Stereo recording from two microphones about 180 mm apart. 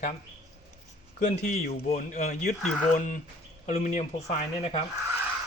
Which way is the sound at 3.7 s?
45° left (ahead or behind).